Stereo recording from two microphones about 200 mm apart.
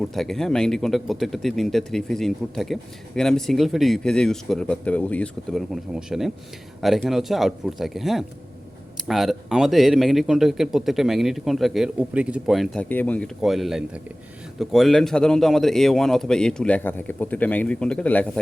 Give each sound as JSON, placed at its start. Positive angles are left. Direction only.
{"t": 0.0, "sound": "a man's voice", "side_deg": 0}